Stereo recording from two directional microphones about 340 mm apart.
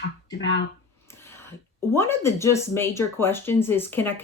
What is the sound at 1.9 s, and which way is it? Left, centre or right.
Speech, centre.